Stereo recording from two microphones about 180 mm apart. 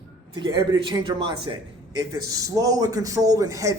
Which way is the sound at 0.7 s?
25° right (ahead or behind).